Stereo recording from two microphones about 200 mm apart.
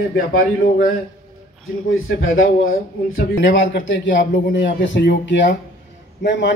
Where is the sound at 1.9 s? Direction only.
90° left; by 3.8 s 65° left (ahead or behind).